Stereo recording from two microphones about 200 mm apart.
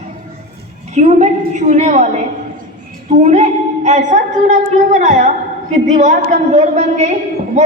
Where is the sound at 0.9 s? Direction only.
35° right (ahead or behind).